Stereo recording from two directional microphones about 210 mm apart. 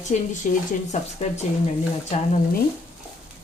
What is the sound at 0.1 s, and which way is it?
Stir, 35° left (ahead or behind).